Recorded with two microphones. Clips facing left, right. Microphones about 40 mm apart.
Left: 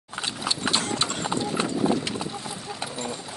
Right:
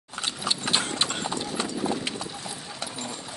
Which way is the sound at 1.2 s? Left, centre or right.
Left.